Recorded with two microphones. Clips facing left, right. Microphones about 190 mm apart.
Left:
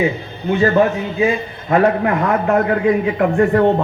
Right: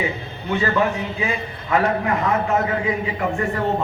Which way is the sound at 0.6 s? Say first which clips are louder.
Left 7 dB; 45° left (ahead or behind).